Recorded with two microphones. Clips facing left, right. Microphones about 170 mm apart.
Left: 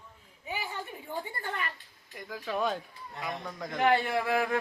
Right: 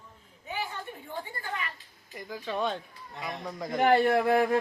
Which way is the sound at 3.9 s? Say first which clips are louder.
Right 9 dB; 55° right (ahead or behind).